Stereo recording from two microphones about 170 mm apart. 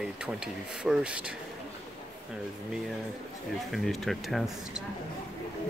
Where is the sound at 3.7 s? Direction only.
Centre (ahead or behind).